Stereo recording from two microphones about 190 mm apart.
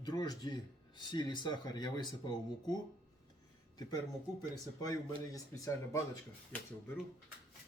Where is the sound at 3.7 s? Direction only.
20° left (ahead or behind).